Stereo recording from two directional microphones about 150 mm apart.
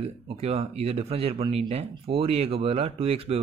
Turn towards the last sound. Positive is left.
turn(degrees=-40)  # may be behind; listen again after turning